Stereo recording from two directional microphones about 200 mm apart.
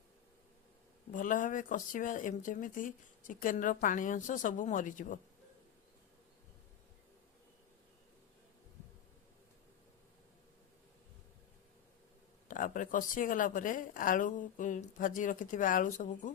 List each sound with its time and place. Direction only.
1.1 s speech: 40° left (ahead or behind)
12.5 s speech: 40° left (ahead or behind)